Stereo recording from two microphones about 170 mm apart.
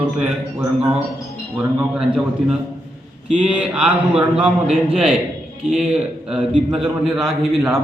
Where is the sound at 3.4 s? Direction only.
5° right (ahead or behind).